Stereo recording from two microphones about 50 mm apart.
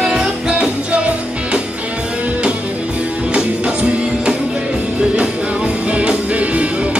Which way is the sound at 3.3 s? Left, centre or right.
Right.